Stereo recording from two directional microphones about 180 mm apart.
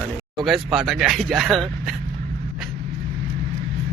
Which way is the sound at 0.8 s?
Centre (ahead or behind).